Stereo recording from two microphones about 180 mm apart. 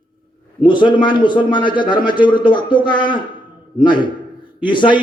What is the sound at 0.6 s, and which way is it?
A man's voice, 25° left (ahead or behind).